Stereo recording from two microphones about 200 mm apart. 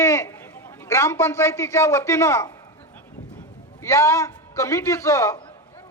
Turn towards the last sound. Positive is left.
turn(degrees=15)  # may be behind; listen again after turning